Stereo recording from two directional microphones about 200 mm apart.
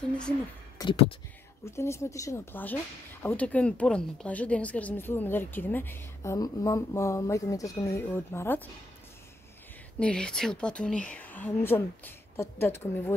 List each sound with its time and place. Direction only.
0.7 s speech: 25° left (ahead or behind)
1.6 s a woman's voice: 15° left (ahead or behind)
9.9 s a woman's voice: 5° left (ahead or behind)